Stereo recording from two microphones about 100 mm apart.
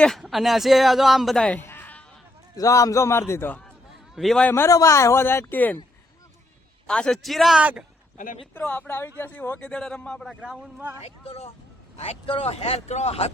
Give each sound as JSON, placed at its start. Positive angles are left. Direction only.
{"t": 0.0, "sound": "speech", "side_deg": 0}
{"t": 1.5, "sound": "music", "side_deg": 20}
{"t": 2.6, "sound": "speech", "side_deg": 35}
{"t": 4.1, "sound": "speech", "side_deg": 0}
{"t": 4.4, "sound": "speech", "side_deg": 25}
{"t": 6.8, "sound": "speech", "side_deg": 10}
{"t": 7.6, "sound": "a man's voice", "side_deg": -15}
{"t": 8.5, "sound": "speech", "side_deg": 20}
{"t": 9.6, "sound": "speech", "side_deg": 10}
{"t": 10.2, "sound": "speech", "side_deg": -5}
{"t": 11.0, "sound": "speech", "side_deg": 85}